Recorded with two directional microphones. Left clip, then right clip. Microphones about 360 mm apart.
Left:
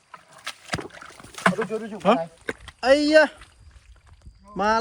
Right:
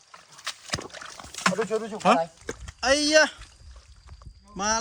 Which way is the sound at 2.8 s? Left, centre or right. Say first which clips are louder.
Left 3 dB; centre.